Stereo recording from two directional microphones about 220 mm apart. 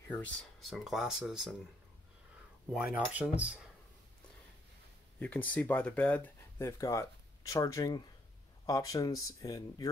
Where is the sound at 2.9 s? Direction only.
5° right (ahead or behind).